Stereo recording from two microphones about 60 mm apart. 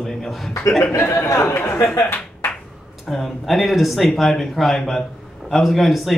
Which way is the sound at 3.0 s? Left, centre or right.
Centre.